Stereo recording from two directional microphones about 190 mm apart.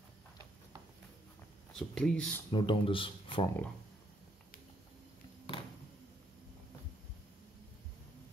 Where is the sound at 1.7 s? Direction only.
Centre (ahead or behind).